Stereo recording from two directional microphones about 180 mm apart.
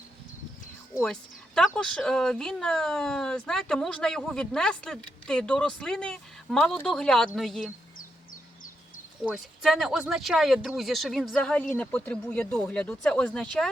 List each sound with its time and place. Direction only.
1.0 s speech: 5° left (ahead or behind)
7.9 s bird: 50° left (ahead or behind)
9.2 s speech: centre (ahead or behind)